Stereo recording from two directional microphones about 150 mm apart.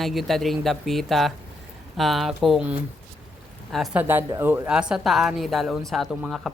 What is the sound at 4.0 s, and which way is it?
Speech, 15° right (ahead or behind).